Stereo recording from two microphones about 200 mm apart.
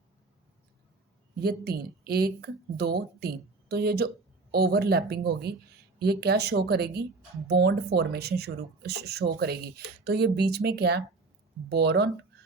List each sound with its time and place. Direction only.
1.4 s speech: 55° right (ahead or behind)